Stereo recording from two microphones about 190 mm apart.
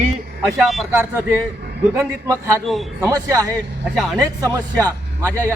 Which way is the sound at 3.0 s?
20° right (ahead or behind).